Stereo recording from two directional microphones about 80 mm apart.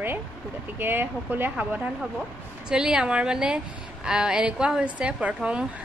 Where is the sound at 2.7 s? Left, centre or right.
Centre.